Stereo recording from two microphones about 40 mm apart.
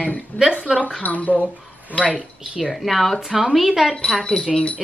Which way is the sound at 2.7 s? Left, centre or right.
Centre.